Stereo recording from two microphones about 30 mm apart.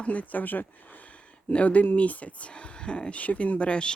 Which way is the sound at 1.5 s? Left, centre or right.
Left.